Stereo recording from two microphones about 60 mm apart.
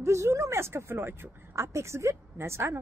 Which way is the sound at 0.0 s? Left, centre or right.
Right.